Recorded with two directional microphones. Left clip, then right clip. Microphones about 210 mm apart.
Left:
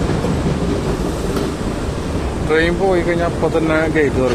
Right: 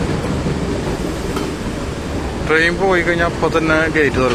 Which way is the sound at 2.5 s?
Centre (ahead or behind).